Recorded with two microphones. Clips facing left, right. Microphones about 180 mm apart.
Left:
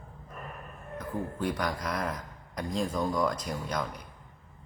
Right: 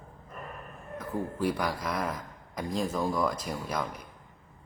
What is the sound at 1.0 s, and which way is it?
Speech, 5° right (ahead or behind).